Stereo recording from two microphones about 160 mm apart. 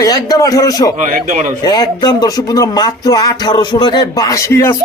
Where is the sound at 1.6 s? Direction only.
25° left (ahead or behind).